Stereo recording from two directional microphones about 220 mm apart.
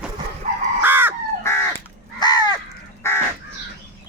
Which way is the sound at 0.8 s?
10° right (ahead or behind).